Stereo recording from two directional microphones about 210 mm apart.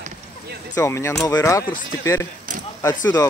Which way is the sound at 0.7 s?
15° left (ahead or behind).